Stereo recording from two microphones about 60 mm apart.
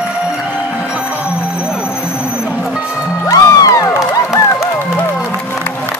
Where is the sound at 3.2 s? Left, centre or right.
Left.